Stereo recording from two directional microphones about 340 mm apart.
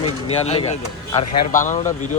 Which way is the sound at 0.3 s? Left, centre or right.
Centre.